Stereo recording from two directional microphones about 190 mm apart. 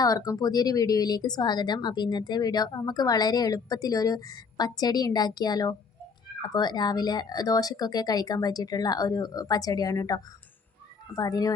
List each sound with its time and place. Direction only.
0.0 s a woman's voice: 20° left (ahead or behind)